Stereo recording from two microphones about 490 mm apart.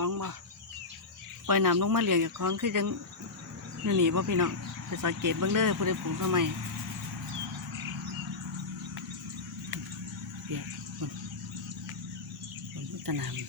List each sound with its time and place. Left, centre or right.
0.0 s cricket: right
1.5 s speech: right
13.1 s speech: right